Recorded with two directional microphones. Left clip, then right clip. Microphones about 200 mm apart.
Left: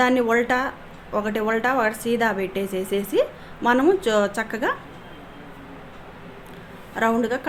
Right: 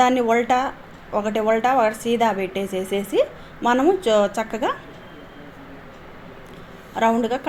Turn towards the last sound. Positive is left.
turn(degrees=0)  # may be behind; listen again after turning